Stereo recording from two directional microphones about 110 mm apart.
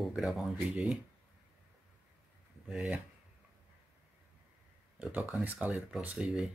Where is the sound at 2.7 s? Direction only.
10° right (ahead or behind).